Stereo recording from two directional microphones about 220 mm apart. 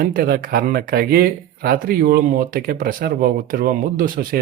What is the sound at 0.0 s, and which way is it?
Speech, 40° right (ahead or behind).